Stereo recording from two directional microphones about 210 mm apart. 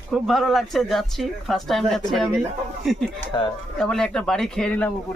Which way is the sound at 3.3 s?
20° left (ahead or behind).